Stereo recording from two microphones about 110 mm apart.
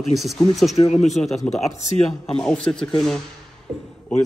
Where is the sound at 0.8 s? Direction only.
90° left.